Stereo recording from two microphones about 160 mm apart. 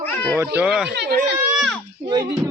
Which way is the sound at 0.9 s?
90° right.